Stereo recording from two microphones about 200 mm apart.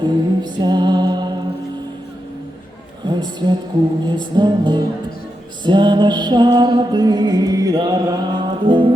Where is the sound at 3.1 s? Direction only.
20° right (ahead or behind).